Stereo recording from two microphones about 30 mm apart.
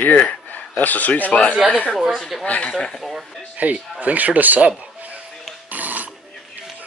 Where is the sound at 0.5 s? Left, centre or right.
Left.